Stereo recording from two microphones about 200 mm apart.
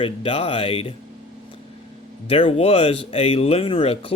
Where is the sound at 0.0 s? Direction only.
30° left (ahead or behind).